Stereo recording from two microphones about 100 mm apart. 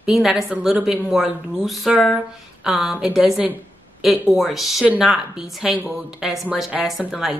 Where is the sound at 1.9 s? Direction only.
Centre (ahead or behind).